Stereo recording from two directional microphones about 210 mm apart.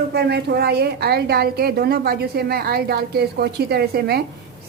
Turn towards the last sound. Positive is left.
turn(degrees=-50)  # may be behind; listen again after turning